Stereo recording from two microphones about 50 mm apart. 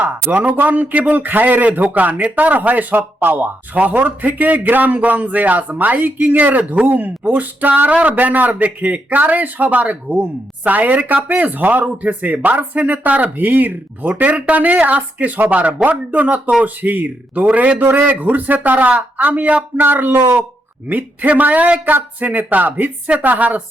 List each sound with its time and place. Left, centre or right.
0.0 s speech: right
17.8 s speech: right
19.7 s speech: right
20.9 s speech: right